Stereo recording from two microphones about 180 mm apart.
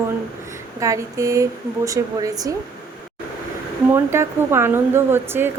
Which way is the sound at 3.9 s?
15° right (ahead or behind).